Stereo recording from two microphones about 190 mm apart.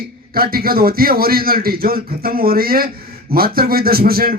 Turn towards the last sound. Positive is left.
turn(degrees=-50)  # may be behind; listen again after turning